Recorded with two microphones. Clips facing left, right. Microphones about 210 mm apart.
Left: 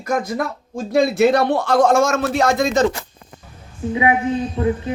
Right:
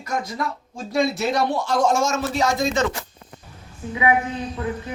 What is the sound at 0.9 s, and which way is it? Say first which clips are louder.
Speech: left 7 dB; 55° left (ahead or behind).